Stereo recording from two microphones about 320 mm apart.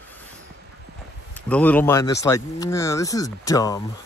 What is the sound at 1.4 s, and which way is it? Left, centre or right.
Speech, centre.